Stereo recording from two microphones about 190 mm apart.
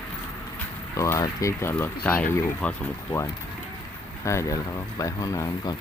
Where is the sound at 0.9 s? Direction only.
15° left (ahead or behind).